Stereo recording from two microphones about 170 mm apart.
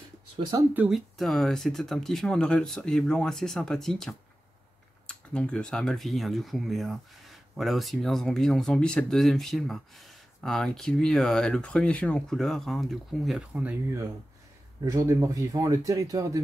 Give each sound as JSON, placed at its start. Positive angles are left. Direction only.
{"t": 0.7, "sound": "speech", "side_deg": -5}
{"t": 14.9, "sound": "speech", "side_deg": -20}